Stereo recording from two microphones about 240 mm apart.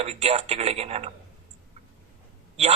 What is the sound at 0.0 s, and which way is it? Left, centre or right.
Speech, right.